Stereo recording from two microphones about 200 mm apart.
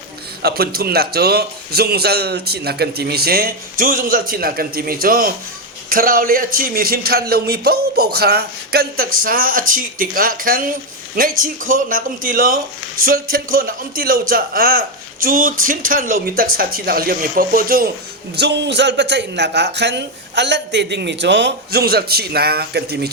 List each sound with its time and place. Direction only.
0.4 s a man's voice: 50° right (ahead or behind)
18.3 s a man's voice: 55° right (ahead or behind)